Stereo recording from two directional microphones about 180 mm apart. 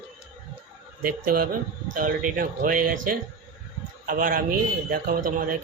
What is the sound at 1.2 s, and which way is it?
A man's voice, 50° right (ahead or behind).